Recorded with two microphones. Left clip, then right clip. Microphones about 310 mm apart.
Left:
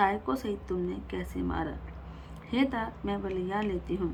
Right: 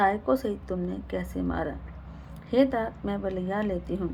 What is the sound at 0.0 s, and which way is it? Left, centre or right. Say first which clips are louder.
A woman's voice: right 4 dB; centre.